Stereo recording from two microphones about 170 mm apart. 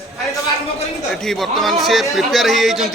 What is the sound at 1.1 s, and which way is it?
A man's voice, centre (ahead or behind).